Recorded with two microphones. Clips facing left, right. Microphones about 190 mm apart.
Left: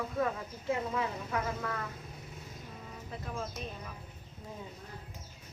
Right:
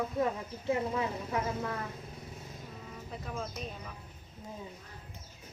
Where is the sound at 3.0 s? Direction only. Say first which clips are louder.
Even; centre (ahead or behind).